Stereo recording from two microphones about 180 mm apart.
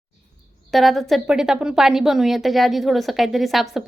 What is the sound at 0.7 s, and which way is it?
A woman's voice, centre (ahead or behind).